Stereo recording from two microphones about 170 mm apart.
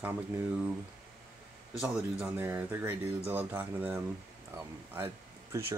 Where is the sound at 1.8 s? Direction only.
5° right (ahead or behind).